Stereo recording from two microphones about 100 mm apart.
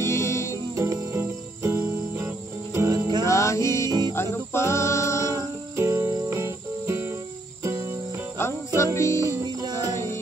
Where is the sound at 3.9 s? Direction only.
45° right (ahead or behind).